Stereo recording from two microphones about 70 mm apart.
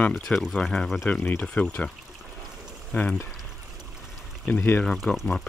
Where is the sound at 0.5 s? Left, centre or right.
Centre.